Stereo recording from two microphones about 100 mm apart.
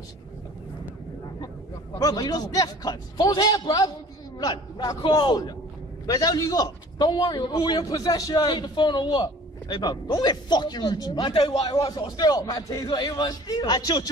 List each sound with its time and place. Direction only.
2.0 s a man's voice: 40° left (ahead or behind); by 10.1 s 60° left (ahead or behind)
10.2 s a man's voice: 45° left (ahead or behind)
11.3 s a man's voice: 65° left (ahead or behind)
11.7 s a man's voice: 40° left (ahead or behind)